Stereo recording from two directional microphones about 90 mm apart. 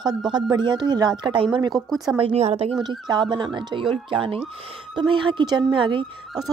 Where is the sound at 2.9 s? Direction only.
60° right (ahead or behind).